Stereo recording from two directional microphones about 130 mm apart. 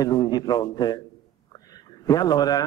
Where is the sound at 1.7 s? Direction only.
30° left (ahead or behind).